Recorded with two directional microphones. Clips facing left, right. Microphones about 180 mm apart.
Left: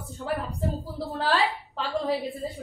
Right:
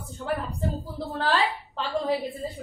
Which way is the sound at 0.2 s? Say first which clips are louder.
Even; centre (ahead or behind).